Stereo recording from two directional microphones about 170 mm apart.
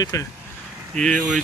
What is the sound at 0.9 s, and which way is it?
Speech, 5° left (ahead or behind).